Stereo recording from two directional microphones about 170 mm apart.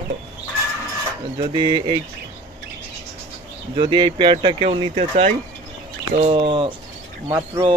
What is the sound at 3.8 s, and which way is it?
Speech, 25° right (ahead or behind).